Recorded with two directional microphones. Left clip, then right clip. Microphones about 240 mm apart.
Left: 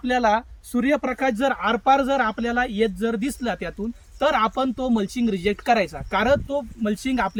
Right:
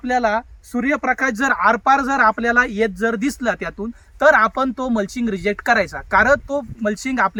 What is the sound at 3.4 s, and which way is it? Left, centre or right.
Speech, right.